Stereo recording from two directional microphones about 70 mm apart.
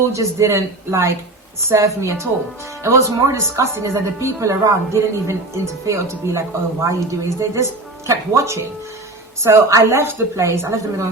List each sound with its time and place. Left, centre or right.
0.1 s a woman's voice: right